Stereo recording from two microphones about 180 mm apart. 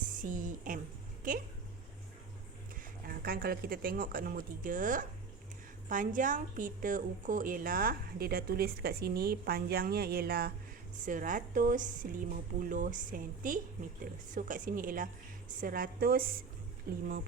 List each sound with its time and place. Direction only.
0.1 s a woman's voice: 45° right (ahead or behind)
3.1 s a woman's voice: 55° right (ahead or behind)
11.0 s a woman's voice: 45° right (ahead or behind)